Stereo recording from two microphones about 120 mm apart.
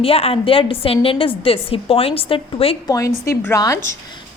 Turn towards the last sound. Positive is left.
turn(degrees=25)  # may be behind; listen again after turning